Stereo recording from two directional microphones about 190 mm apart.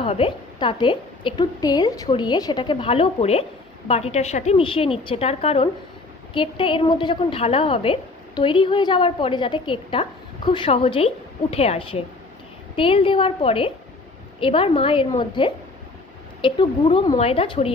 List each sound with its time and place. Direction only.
0.0 s a woman's voice: 30° left (ahead or behind)